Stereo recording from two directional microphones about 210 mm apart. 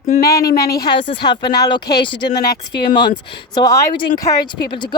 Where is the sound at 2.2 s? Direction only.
50° left (ahead or behind).